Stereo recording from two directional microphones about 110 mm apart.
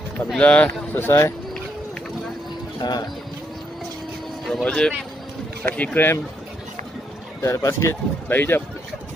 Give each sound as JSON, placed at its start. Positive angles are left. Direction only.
{"t": 0.3, "sound": "speech", "side_deg": 10}
{"t": 2.8, "sound": "speech", "side_deg": 40}
{"t": 4.5, "sound": "speech", "side_deg": 5}
{"t": 7.4, "sound": "speech", "side_deg": 25}